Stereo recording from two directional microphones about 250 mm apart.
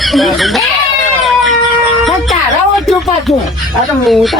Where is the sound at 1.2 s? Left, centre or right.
Centre.